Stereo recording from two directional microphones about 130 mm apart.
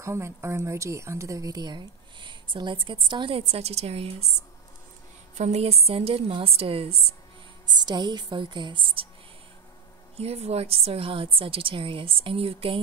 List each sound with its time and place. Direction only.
0.0 s speech: 20° right (ahead or behind); by 4.1 s 50° right (ahead or behind)
5.4 s a woman's voice: 55° right (ahead or behind)
7.7 s speech: 35° right (ahead or behind)
10.1 s a woman's voice: 50° right (ahead or behind)